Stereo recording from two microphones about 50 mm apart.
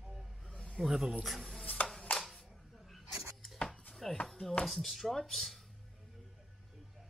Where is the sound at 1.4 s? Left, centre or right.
Centre.